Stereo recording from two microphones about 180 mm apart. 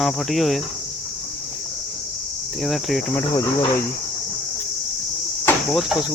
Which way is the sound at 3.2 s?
20° left (ahead or behind).